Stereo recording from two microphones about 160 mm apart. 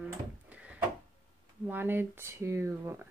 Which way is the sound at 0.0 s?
10° right (ahead or behind).